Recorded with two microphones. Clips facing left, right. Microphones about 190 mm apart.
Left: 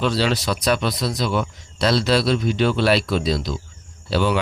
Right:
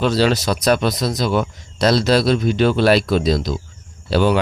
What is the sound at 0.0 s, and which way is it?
Speech, 45° right (ahead or behind).